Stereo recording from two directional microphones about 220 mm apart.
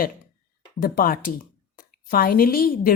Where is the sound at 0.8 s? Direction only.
40° left (ahead or behind).